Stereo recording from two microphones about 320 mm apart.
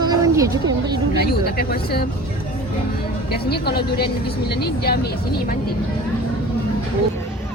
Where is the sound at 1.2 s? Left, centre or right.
Left.